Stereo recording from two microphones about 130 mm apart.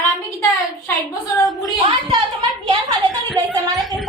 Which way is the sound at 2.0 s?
40° right (ahead or behind).